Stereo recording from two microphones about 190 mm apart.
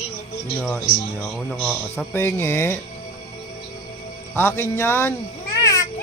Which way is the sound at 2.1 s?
15° left (ahead or behind).